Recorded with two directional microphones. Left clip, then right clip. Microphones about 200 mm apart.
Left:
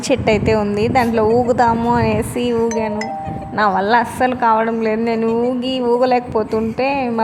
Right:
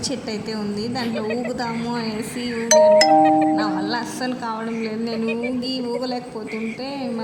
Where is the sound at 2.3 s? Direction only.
70° left (ahead or behind).